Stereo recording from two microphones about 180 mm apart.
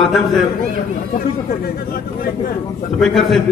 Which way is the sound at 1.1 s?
55° left (ahead or behind).